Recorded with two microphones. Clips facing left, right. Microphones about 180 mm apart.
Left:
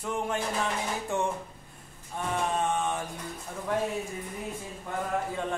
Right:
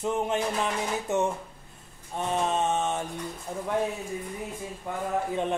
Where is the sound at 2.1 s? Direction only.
25° right (ahead or behind).